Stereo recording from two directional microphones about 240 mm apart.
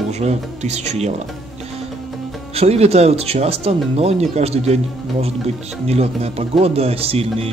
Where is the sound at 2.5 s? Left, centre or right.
Right.